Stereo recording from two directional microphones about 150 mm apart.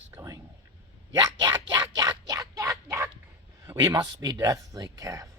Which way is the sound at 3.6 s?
20° right (ahead or behind).